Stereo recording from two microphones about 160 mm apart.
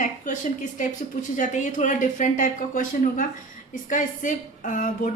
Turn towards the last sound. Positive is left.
turn(degrees=55)  # may be behind; listen again after turning